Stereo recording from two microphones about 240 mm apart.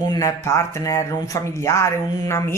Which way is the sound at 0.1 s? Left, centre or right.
Centre.